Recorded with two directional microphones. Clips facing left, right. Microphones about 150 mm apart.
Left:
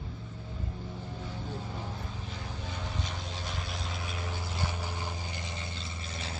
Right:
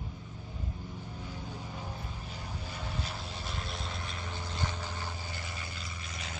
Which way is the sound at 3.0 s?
5° right (ahead or behind).